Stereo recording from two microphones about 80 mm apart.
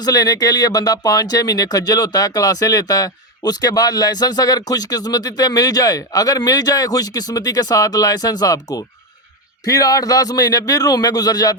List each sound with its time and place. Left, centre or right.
0.0 s speech: left